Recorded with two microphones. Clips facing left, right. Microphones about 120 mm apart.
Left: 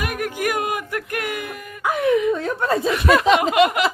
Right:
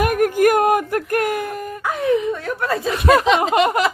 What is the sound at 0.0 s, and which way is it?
Speech, 45° right (ahead or behind).